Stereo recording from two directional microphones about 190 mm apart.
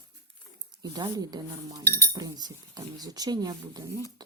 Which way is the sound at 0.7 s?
20° right (ahead or behind).